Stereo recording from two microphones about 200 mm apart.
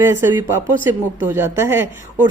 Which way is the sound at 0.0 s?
15° right (ahead or behind).